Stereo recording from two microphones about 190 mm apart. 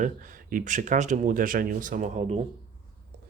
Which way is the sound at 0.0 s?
45° right (ahead or behind).